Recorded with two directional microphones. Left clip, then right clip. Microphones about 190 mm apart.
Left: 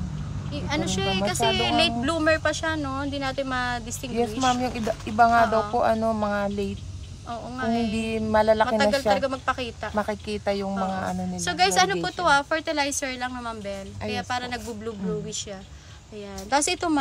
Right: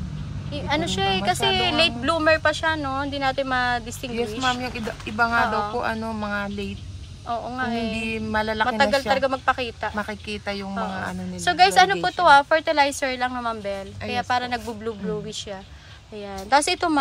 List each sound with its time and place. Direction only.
0.6 s a woman's voice: 5° left (ahead or behind)
4.5 s speech: 55° left (ahead or behind)
7.2 s a woman's voice: 5° left (ahead or behind)
8.0 s speech: 55° left (ahead or behind)
8.6 s a woman's voice: 10° left (ahead or behind)
9.9 s speech: 55° left (ahead or behind)
11.4 s a woman's voice: 5° left (ahead or behind)
16.4 s a woman's voice: 15° left (ahead or behind)